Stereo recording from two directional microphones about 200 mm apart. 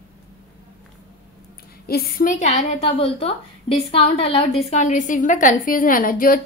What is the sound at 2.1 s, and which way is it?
A woman's voice, 40° left (ahead or behind).